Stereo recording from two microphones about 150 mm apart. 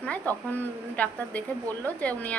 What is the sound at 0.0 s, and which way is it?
A woman's voice, 10° left (ahead or behind).